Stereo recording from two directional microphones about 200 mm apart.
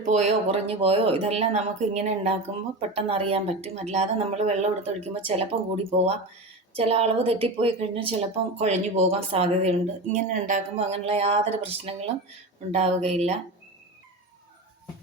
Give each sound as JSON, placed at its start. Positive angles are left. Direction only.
{"t": 0.0, "sound": "a woman's voice", "side_deg": -35}